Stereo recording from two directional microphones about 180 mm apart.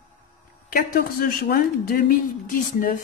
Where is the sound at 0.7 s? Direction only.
55° left (ahead or behind).